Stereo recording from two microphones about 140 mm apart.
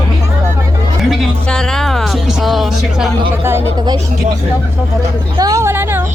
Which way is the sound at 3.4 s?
15° right (ahead or behind).